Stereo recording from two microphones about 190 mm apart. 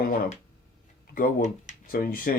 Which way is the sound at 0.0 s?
50° left (ahead or behind).